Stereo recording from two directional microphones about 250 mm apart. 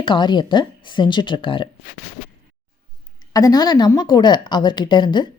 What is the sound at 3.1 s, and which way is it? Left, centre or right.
Speech, centre.